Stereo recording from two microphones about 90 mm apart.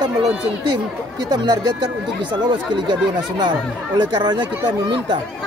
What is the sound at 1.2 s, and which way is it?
Speech, 50° right (ahead or behind).